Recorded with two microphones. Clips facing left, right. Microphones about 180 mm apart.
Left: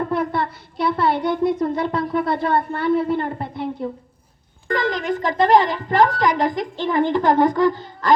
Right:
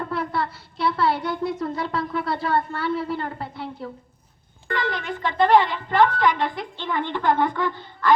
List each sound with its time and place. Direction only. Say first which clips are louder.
0.1 s speech: left 4 dB; 20° left (ahead or behind)
3.2 s a sound: left 6 dB; 20° left (ahead or behind)
4.7 s speech: left 6 dB; 40° left (ahead or behind)